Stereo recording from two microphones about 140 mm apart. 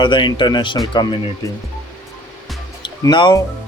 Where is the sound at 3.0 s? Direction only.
30° left (ahead or behind).